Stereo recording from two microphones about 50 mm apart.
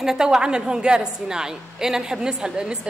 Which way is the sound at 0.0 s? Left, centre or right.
Centre.